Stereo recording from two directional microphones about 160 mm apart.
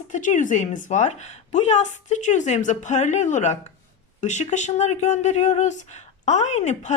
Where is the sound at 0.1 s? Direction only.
50° left (ahead or behind).